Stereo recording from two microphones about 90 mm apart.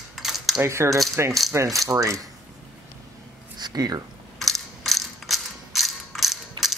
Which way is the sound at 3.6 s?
50° right (ahead or behind).